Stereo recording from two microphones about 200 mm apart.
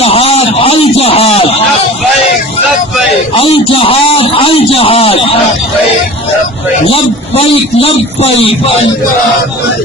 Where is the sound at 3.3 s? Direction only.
25° left (ahead or behind).